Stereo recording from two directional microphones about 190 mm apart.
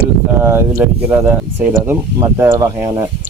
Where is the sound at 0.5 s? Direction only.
15° right (ahead or behind).